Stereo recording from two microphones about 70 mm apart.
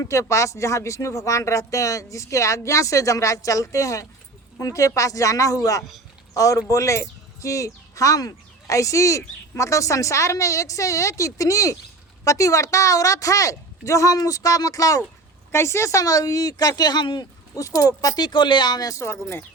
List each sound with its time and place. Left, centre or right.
0.0 s speech: left
15.5 s speech: left
17.5 s speech: left
18.2 s speech: left
18.9 s speech: left